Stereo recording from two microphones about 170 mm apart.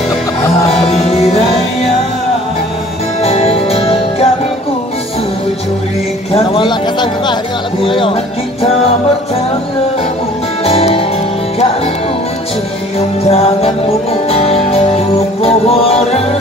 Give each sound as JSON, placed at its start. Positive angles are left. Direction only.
{"t": 0.7, "sound": "music", "side_deg": 40}
{"t": 3.2, "sound": "music", "side_deg": 35}
{"t": 6.3, "sound": "a sound", "side_deg": 30}
{"t": 7.8, "sound": "speech", "side_deg": 30}
{"t": 10.6, "sound": "music", "side_deg": 35}
{"t": 13.3, "sound": "music", "side_deg": 35}